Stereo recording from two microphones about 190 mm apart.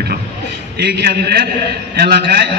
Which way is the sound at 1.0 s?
60° right (ahead or behind).